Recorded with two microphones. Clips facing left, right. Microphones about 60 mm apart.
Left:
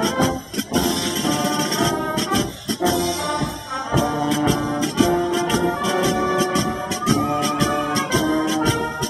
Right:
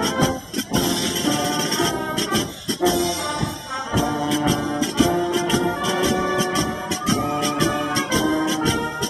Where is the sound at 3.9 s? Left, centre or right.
Centre.